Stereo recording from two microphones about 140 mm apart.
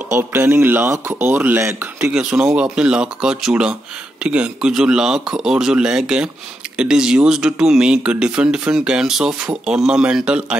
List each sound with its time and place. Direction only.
0.1 s speech: 15° right (ahead or behind)
2.0 s speech: 5° right (ahead or behind)